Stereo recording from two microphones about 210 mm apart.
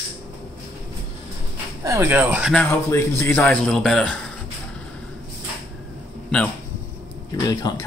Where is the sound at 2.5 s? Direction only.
10° left (ahead or behind).